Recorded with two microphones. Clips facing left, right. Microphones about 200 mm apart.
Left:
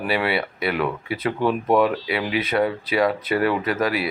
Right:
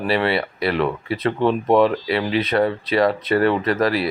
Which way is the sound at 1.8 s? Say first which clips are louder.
Right 3 dB; 5° left (ahead or behind).